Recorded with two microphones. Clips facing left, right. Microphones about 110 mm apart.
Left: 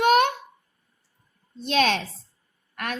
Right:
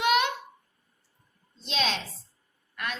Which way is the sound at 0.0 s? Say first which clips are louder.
Left 6 dB; 50° left (ahead or behind).